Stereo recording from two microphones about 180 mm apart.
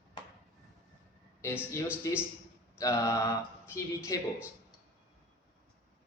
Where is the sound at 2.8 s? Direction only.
15° left (ahead or behind).